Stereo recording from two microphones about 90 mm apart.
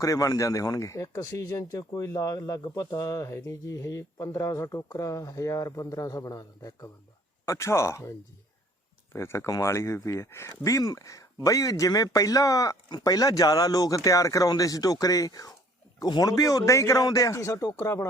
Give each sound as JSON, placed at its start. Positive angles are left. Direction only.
{"t": 0.0, "sound": "speech", "side_deg": 40}
{"t": 7.4, "sound": "speech", "side_deg": 30}
{"t": 9.1, "sound": "a man's voice", "side_deg": 30}
{"t": 16.3, "sound": "speech", "side_deg": 40}